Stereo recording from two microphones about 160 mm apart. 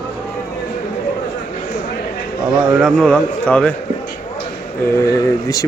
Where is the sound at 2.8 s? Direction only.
Centre (ahead or behind).